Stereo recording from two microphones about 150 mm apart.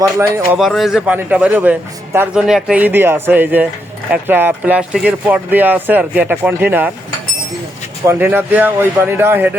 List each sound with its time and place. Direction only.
0.0 s speech: 20° right (ahead or behind)
0.5 s speech: centre (ahead or behind)
2.5 s speech: 5° right (ahead or behind)
8.0 s speech: 15° right (ahead or behind)